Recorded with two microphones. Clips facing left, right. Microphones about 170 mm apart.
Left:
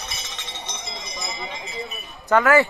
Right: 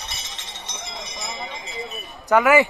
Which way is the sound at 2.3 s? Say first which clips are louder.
Right 1 dB; 15° right (ahead or behind).